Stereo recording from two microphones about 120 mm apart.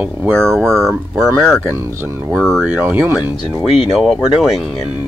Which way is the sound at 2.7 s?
20° right (ahead or behind).